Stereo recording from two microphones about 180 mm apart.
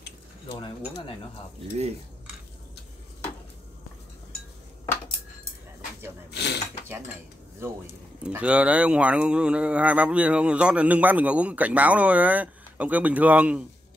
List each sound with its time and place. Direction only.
6.3 s mechanisms: 70° left (ahead or behind)
8.2 s speech: 5° right (ahead or behind)